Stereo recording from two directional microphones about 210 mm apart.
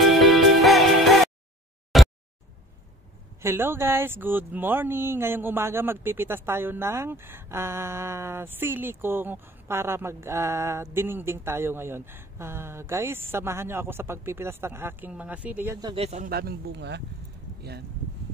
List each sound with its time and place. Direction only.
0.0 s music: centre (ahead or behind)
1.9 s a sound: centre (ahead or behind)
3.4 s speech: 10° right (ahead or behind)
15.9 s speech: 30° right (ahead or behind)
16.3 s speech: 50° right (ahead or behind)